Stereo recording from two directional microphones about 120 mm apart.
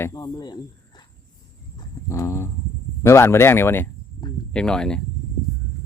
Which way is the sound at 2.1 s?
25° left (ahead or behind).